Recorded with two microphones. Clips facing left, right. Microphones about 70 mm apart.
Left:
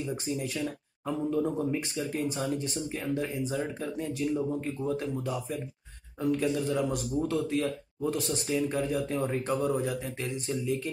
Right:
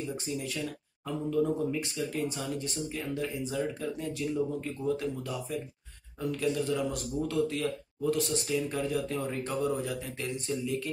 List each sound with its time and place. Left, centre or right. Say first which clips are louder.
0.4 s speech: left 3 dB; left
6.4 s speech: left 1 dB; left
8.7 s speech: left 2 dB; centre
9.3 s speech: left 2 dB; left